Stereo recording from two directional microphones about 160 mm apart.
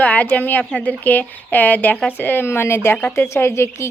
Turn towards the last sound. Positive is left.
turn(degrees=15)  # may be behind; listen again after turning